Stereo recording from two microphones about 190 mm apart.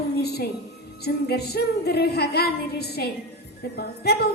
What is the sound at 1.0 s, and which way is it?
A woman's voice, 60° left (ahead or behind).